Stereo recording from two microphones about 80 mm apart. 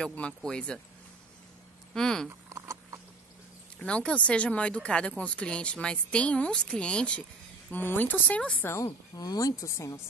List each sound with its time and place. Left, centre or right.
0.0 s speech: centre
2.0 s speech: centre
2.2 s a sound: right
3.8 s speech: centre
8.8 s speech: left